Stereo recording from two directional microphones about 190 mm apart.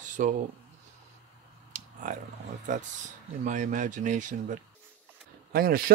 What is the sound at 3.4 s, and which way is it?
Speech, 40° right (ahead or behind).